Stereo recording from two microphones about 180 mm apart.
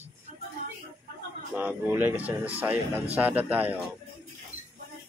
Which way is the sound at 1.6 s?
10° right (ahead or behind).